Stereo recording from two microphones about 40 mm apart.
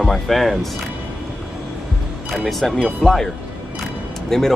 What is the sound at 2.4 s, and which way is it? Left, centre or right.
Speech, centre.